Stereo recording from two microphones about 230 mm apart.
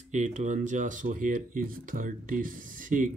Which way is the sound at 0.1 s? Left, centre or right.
Right.